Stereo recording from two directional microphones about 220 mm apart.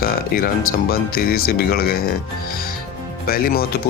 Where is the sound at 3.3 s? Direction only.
45° left (ahead or behind).